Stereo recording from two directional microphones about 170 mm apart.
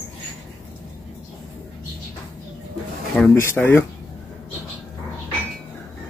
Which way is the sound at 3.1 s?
10° left (ahead or behind).